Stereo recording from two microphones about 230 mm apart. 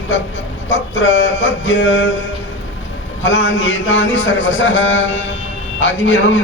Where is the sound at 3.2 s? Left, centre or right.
Left.